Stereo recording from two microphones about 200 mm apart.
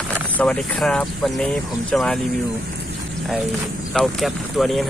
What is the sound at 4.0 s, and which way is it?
Speech, centre (ahead or behind).